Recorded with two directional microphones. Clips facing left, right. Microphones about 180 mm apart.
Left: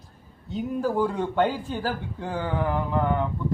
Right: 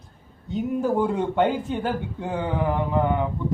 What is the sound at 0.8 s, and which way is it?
Speech, 20° right (ahead or behind).